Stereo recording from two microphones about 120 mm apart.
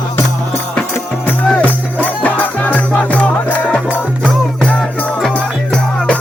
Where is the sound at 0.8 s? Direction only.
15° left (ahead or behind).